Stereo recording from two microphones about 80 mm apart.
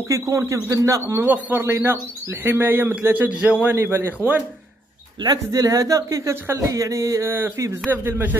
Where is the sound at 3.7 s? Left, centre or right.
Right.